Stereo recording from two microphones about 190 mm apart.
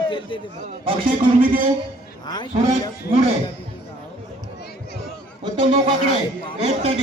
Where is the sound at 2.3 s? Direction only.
20° left (ahead or behind).